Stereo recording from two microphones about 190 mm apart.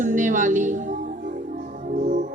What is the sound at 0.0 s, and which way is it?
Music, 45° right (ahead or behind).